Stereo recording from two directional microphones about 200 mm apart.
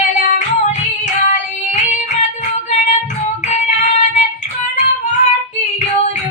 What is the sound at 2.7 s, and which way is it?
Female singing, 35° left (ahead or behind).